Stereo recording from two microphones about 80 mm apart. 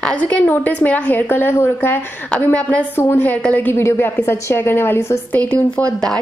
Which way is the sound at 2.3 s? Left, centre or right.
Centre.